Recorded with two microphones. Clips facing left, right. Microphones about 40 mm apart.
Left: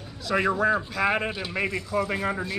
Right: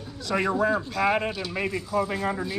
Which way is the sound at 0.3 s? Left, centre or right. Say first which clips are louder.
Left 1 dB; centre.